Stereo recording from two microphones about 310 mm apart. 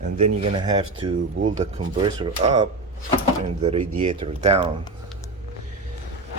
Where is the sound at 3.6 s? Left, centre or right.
Centre.